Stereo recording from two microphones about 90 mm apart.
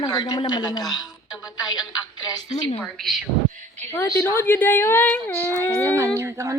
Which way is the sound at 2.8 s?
5° left (ahead or behind).